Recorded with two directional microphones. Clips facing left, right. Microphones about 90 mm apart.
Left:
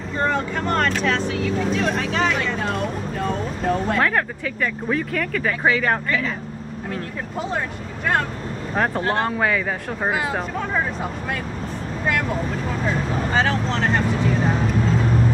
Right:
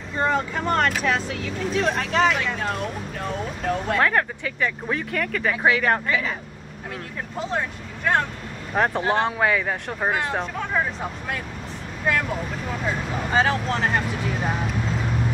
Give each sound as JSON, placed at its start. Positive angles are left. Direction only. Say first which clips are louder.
{"t": 0.2, "sound": "speech", "louder": "even", "side_deg": -5}
{"t": 13.3, "sound": "speech", "louder": "right 1 dB", "side_deg": -10}